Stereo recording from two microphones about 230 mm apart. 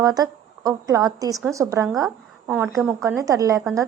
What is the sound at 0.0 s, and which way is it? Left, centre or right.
A woman's voice, centre.